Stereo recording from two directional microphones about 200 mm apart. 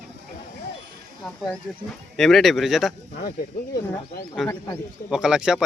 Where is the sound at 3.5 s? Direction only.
45° left (ahead or behind).